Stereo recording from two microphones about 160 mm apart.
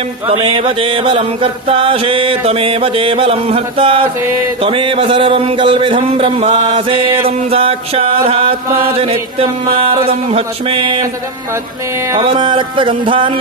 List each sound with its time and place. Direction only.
0.3 s music: 35° right (ahead or behind)
12.2 s music: 30° right (ahead or behind)